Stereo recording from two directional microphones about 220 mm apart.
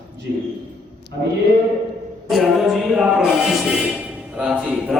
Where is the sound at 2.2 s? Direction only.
Centre (ahead or behind).